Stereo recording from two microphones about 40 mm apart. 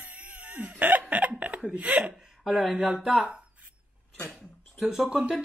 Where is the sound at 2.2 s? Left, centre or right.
Centre.